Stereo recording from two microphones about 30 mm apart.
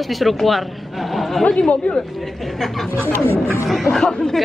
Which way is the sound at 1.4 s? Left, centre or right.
Left.